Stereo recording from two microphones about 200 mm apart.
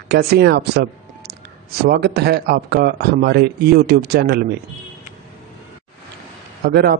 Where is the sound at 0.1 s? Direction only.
55° right (ahead or behind).